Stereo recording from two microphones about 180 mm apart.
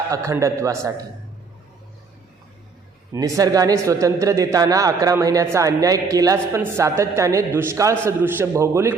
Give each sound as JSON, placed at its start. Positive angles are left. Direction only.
{"t": 0.1, "sound": "a man's voice", "side_deg": -15}
{"t": 3.1, "sound": "a man's voice", "side_deg": -15}